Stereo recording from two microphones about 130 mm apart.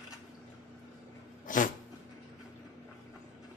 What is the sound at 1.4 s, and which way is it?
Dog, 90° left.